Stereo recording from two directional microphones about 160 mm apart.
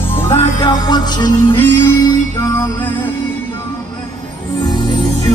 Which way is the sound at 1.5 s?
15° left (ahead or behind).